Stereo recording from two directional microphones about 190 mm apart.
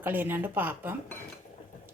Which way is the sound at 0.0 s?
10° right (ahead or behind).